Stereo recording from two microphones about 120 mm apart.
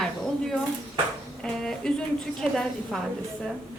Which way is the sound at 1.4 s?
5° left (ahead or behind).